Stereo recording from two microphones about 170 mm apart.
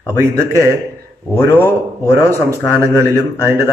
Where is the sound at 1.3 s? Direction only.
15° left (ahead or behind).